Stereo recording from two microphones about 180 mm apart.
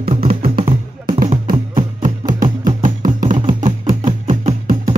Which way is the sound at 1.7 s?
45° right (ahead or behind).